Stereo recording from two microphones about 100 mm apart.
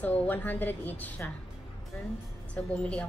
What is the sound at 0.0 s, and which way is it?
A woman's voice, 20° left (ahead or behind).